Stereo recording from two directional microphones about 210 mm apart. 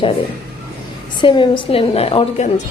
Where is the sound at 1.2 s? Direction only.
25° left (ahead or behind).